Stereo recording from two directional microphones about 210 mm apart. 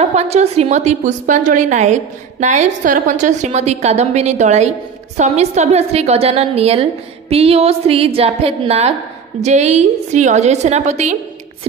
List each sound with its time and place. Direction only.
0.0 s a woman's voice: 30° right (ahead or behind)